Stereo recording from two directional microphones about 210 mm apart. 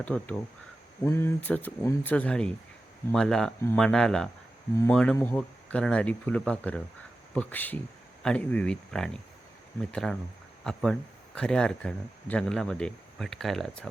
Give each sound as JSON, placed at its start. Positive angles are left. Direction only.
{"t": 0.0, "sound": "speech", "side_deg": 5}